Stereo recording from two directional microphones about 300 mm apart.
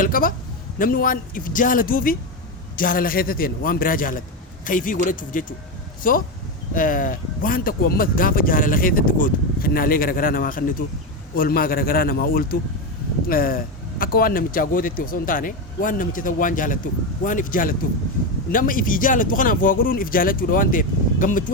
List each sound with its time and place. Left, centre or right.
0.0 s speech: left